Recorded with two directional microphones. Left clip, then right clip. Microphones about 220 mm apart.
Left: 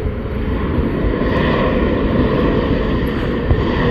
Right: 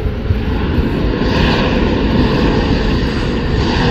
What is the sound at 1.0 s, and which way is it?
Vehicle, 40° right (ahead or behind).